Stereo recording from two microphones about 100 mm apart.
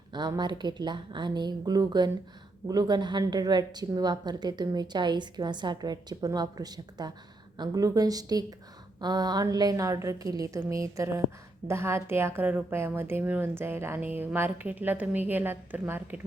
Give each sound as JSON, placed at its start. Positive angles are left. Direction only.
{"t": 0.1, "sound": "a woman's voice", "side_deg": -45}